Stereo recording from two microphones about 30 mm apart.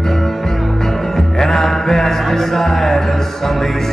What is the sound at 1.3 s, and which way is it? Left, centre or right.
Mantra, centre.